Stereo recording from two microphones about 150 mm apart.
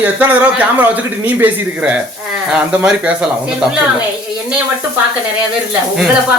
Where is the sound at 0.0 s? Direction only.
10° right (ahead or behind).